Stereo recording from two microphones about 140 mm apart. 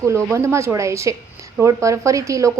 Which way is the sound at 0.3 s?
20° right (ahead or behind).